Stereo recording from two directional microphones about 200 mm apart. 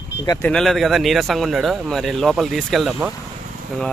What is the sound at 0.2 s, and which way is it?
Speech, 20° left (ahead or behind).